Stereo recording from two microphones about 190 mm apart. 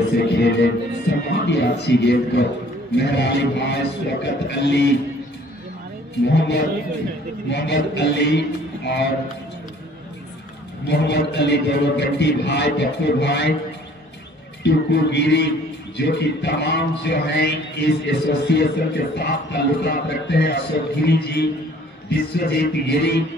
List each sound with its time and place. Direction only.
0.2 s a man's voice: 65° left (ahead or behind)
6.2 s a man's voice: 65° left (ahead or behind)
10.9 s a man's voice: 60° left (ahead or behind)
14.6 s a man's voice: 65° left (ahead or behind)